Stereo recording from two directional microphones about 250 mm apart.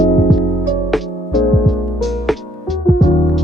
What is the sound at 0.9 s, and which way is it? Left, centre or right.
Music, centre.